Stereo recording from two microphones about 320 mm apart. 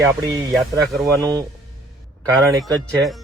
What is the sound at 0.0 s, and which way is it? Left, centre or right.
A man's voice, centre.